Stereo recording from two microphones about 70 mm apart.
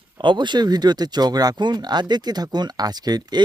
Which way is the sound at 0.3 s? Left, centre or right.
Right.